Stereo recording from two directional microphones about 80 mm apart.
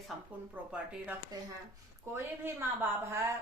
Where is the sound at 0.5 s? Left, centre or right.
Centre.